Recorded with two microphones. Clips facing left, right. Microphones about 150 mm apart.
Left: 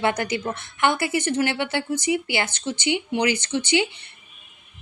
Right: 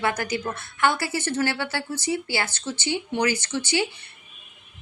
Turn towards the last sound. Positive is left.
turn(degrees=20)  # may be behind; listen again after turning